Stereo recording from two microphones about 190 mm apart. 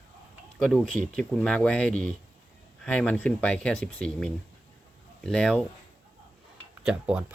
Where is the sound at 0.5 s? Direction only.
Centre (ahead or behind).